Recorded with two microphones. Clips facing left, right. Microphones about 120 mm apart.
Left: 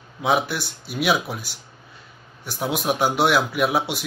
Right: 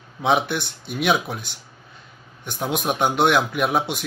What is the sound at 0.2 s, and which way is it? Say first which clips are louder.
A man's voice: right 1 dB; 5° left (ahead or behind).